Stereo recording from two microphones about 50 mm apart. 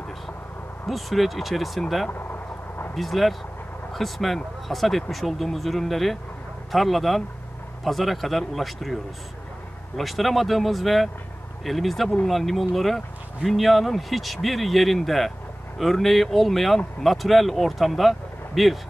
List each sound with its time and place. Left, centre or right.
0.8 s speech: centre
2.0 s a sound: left
2.9 s speech: centre